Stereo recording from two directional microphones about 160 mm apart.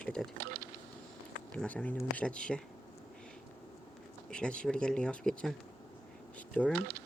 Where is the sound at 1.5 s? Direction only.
10° left (ahead or behind).